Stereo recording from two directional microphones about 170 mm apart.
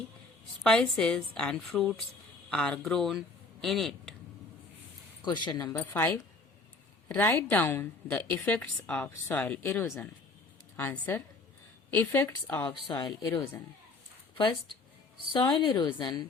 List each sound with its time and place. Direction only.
0.6 s a woman's voice: 5° left (ahead or behind)
5.5 s a woman's voice: 20° left (ahead or behind)
12.9 s a woman's voice: 25° left (ahead or behind)